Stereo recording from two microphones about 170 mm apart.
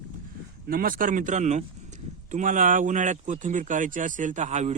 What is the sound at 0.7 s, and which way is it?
Speech, 55° right (ahead or behind).